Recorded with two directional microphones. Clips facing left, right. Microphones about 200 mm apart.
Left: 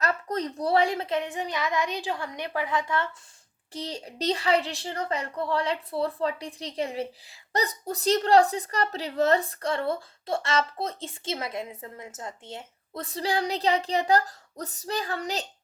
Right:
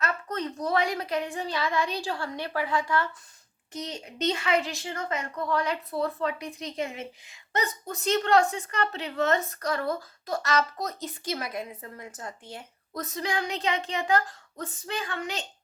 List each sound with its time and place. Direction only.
0.0 s a child's voice: 35° left (ahead or behind)